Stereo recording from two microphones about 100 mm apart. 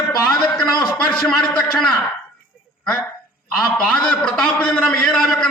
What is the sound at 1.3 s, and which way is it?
Speech, 5° left (ahead or behind).